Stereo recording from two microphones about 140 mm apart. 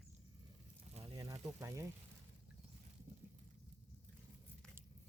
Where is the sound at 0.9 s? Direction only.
45° right (ahead or behind).